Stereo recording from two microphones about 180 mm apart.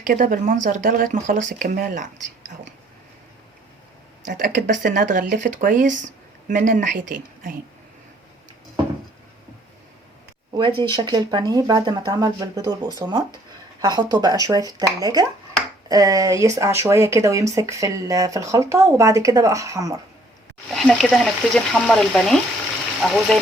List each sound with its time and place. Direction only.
0.0 s speech: 50° right (ahead or behind)
4.4 s speech: 50° right (ahead or behind)
10.6 s speech: 25° right (ahead or behind)
20.7 s speech: centre (ahead or behind)